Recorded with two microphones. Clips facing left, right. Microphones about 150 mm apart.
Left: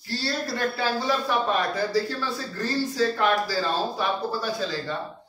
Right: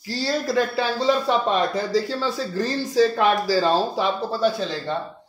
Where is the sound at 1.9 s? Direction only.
90° right.